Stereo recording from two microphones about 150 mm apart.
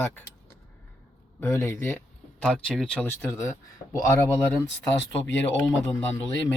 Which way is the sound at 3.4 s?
20° left (ahead or behind).